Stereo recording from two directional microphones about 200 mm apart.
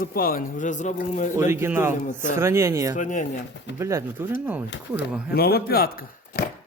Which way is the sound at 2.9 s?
40° left (ahead or behind).